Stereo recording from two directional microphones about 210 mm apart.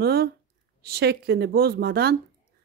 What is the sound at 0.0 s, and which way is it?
A woman's voice, 50° right (ahead or behind).